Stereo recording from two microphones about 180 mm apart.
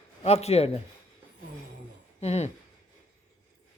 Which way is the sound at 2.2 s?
35° left (ahead or behind).